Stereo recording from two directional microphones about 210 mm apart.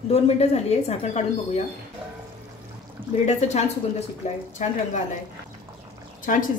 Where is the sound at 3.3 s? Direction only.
30° left (ahead or behind).